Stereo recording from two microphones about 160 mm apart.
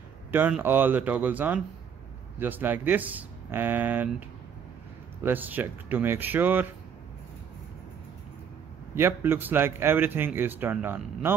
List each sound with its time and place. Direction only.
0.3 s speech: 10° right (ahead or behind)
5.2 s speech: 10° right (ahead or behind)
8.9 s speech: 15° right (ahead or behind)